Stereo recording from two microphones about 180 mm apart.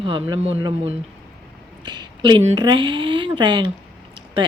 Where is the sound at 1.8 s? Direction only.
25° right (ahead or behind).